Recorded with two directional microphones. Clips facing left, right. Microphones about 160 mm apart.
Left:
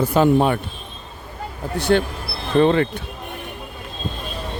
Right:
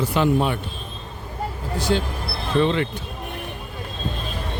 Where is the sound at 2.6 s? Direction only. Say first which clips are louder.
Left 5 dB; 50° left (ahead or behind).